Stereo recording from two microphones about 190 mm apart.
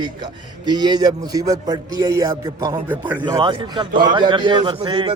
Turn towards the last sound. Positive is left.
turn(degrees=-25)  # may be behind; listen again after turning